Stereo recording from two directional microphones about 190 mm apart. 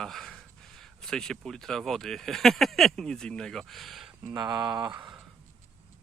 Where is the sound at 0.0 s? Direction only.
Centre (ahead or behind).